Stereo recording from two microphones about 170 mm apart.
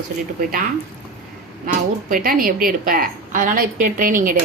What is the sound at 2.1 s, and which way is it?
A woman's voice, 55° right (ahead or behind).